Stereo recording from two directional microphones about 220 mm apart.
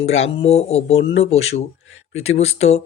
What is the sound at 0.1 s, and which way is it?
Speech, 25° left (ahead or behind).